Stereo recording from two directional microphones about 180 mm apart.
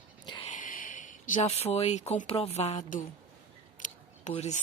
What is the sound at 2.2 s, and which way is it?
A woman's voice, 35° left (ahead or behind).